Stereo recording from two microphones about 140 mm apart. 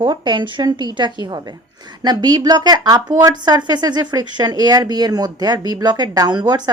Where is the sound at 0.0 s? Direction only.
35° right (ahead or behind).